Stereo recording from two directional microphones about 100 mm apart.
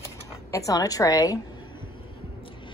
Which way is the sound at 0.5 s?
35° left (ahead or behind).